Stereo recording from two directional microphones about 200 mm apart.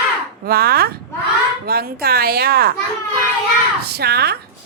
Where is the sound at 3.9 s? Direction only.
55° right (ahead or behind).